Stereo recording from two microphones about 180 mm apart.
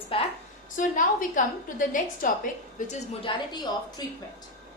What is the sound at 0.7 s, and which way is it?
A woman's voice, 45° left (ahead or behind).